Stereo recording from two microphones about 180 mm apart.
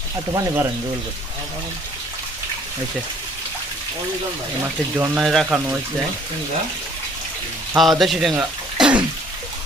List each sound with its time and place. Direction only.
0.3 s speech: 15° right (ahead or behind)
4.9 s speech: 10° right (ahead or behind)
5.2 s speech: centre (ahead or behind)
5.5 s speech: 10° right (ahead or behind)
7.8 s speech: centre (ahead or behind)